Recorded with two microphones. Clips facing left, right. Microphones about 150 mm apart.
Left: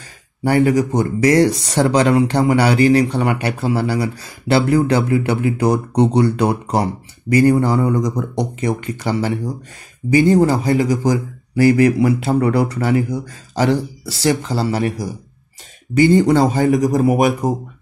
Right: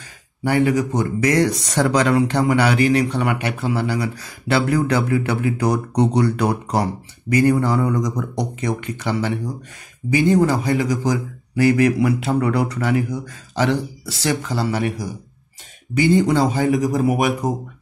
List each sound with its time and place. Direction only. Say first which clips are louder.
0.4 s a man's voice: left 3 dB; 40° left (ahead or behind)
16.0 s speech: left 4 dB; 50° left (ahead or behind)